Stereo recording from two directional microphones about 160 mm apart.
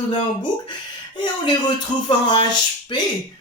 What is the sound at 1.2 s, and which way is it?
Speech, 30° left (ahead or behind).